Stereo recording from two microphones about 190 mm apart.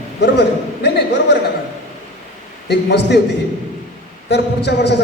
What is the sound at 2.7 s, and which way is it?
Speech, 60° left (ahead or behind).